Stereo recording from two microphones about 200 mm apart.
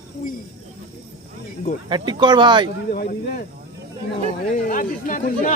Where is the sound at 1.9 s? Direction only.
25° right (ahead or behind).